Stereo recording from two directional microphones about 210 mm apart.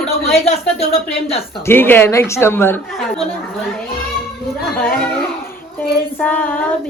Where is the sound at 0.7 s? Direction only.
30° left (ahead or behind).